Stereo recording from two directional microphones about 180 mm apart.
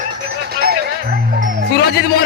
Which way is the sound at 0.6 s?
60° right (ahead or behind).